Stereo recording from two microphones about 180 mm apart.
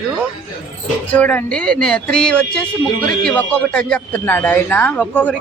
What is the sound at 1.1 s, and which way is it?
A woman's voice, 10° left (ahead or behind).